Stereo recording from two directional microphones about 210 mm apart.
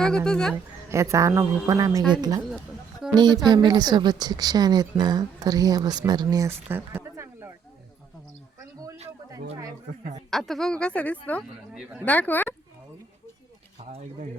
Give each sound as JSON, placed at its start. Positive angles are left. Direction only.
{"t": 0.3, "sound": "a woman's voice", "side_deg": 5}
{"t": 0.5, "sound": "a woman's voice", "side_deg": -15}
{"t": 10.2, "sound": "a woman's voice", "side_deg": 0}
{"t": 11.7, "sound": "a woman's voice", "side_deg": -5}
{"t": 12.0, "sound": "speech", "side_deg": 10}
{"t": 13.7, "sound": "speech", "side_deg": -30}